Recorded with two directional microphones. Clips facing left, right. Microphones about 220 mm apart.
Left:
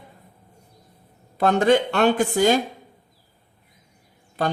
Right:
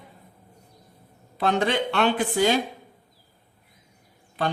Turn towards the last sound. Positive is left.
turn(degrees=45)  # may be behind; listen again after turning